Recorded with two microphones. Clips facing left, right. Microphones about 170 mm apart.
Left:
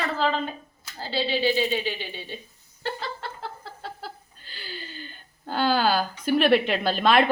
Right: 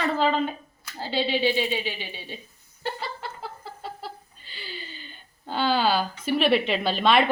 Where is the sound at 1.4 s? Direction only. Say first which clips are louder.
Left 3 dB; 40° left (ahead or behind).